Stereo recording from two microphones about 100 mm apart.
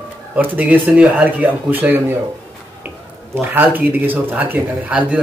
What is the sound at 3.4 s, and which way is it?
Speech, 20° right (ahead or behind).